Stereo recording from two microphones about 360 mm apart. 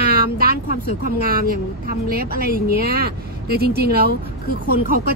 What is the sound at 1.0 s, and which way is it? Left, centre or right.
Speech, right.